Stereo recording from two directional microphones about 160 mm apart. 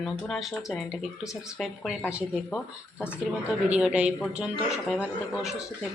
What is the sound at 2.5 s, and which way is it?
Speech, 10° left (ahead or behind).